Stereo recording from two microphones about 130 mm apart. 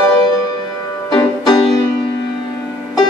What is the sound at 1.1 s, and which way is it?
Music, 35° left (ahead or behind).